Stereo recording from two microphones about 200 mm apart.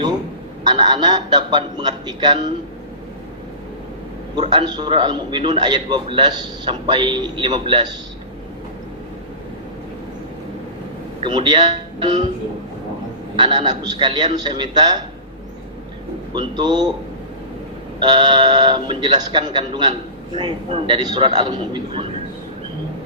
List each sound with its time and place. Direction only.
0.6 s a man's voice: 20° right (ahead or behind)
4.4 s a man's voice: 20° right (ahead or behind)
11.2 s a man's voice: 25° right (ahead or behind)
13.3 s a man's voice: 20° right (ahead or behind)
16.3 s a man's voice: 20° right (ahead or behind)
18.0 s a man's voice: 20° right (ahead or behind)